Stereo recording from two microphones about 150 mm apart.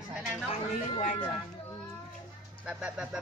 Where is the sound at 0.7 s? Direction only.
55° left (ahead or behind).